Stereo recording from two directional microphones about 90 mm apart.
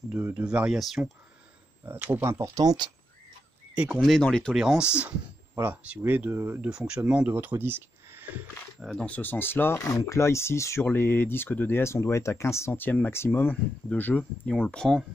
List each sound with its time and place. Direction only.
0.3 s speech: 10° right (ahead or behind)
0.7 s speech: centre (ahead or behind)
1.9 s speech: 20° right (ahead or behind)
2.2 s speech: 35° right (ahead or behind)
2.6 s speech: 50° right (ahead or behind)
3.7 s speech: 15° right (ahead or behind)
4.0 s speech: 5° left (ahead or behind)
4.6 s speech: 5° right (ahead or behind); by 6.7 s 25° right (ahead or behind)
6.7 s speech: 10° right (ahead or behind)
8.9 s speech: 15° left (ahead or behind)
9.8 s speech: 35° left (ahead or behind); by 15.0 s 10° left (ahead or behind)